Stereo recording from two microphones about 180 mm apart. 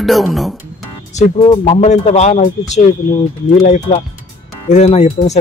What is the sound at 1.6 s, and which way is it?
Speech, 40° left (ahead or behind).